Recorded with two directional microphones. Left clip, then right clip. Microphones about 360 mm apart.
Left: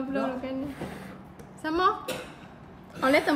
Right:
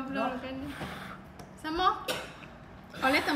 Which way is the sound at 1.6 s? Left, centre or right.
Centre.